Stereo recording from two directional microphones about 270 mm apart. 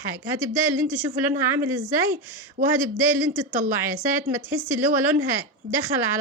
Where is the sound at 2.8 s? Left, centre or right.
Centre.